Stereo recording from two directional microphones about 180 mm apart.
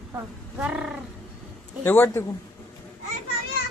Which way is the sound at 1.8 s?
10° left (ahead or behind).